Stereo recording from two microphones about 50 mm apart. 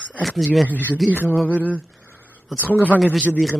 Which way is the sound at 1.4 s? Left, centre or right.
Right.